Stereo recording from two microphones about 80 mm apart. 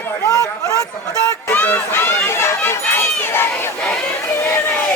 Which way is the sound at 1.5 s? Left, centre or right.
Left.